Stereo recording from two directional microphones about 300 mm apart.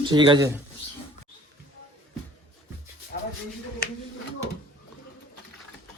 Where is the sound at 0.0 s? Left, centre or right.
Centre.